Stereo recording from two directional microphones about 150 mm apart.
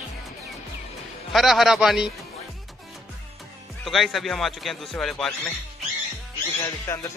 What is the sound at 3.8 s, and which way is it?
Speech, centre (ahead or behind).